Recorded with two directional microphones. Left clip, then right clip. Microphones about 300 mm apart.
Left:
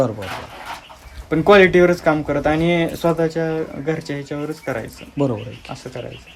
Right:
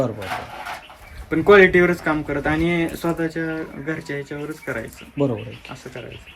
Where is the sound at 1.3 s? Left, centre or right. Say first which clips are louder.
Left 1 dB; left.